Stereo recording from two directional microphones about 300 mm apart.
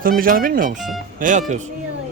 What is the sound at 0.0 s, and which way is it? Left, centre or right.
Speech, right.